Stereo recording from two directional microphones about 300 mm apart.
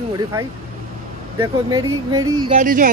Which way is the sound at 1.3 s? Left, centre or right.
Centre.